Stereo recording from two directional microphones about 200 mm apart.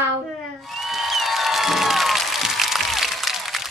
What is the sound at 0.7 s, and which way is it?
Applause, centre (ahead or behind).